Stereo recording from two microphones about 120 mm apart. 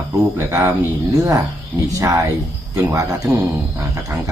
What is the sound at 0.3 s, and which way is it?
Speech, 25° right (ahead or behind).